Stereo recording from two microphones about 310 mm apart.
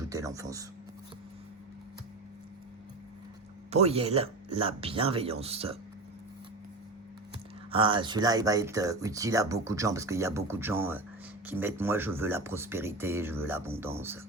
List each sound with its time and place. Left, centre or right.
0.0 s a sound: centre
3.7 s speech: centre
7.7 s speech: centre